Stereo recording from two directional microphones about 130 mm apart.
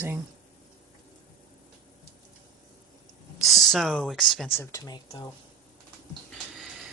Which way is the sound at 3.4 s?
Centre (ahead or behind).